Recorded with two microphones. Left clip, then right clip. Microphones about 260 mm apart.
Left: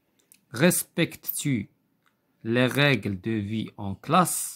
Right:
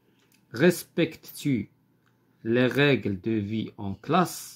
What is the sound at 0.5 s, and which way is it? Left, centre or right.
Speech, left.